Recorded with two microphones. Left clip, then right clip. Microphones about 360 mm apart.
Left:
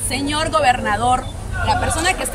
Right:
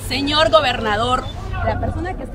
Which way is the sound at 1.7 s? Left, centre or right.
Left.